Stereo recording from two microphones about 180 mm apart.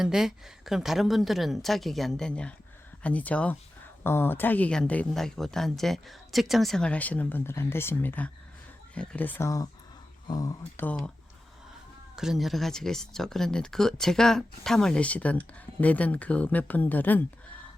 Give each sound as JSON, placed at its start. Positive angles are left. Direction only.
{"t": 0.0, "sound": "a woman's voice", "side_deg": 0}
{"t": 10.8, "sound": "a woman's voice", "side_deg": 5}
{"t": 12.1, "sound": "speech", "side_deg": 0}